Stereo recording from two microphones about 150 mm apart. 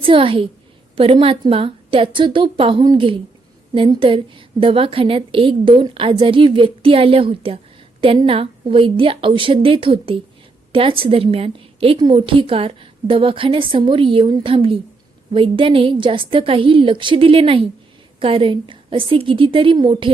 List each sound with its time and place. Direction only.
0.0 s a woman's voice: 35° right (ahead or behind)